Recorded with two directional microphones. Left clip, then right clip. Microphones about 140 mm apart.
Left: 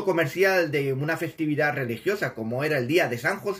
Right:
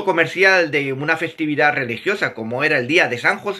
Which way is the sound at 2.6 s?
40° right (ahead or behind).